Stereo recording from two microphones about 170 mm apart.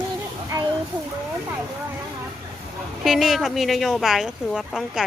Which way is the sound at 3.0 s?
Centre (ahead or behind).